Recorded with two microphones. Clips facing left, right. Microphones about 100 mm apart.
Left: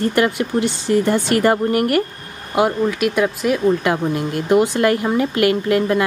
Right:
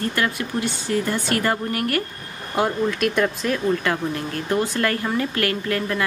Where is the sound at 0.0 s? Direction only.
20° left (ahead or behind).